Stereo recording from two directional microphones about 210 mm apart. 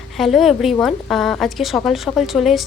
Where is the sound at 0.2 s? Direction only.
Centre (ahead or behind).